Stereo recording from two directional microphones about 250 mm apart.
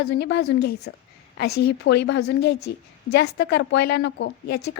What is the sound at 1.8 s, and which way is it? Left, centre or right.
A woman's voice, left.